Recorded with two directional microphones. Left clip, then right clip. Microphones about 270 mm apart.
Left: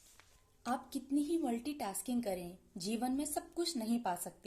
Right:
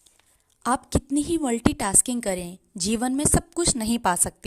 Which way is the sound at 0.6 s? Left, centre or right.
Right.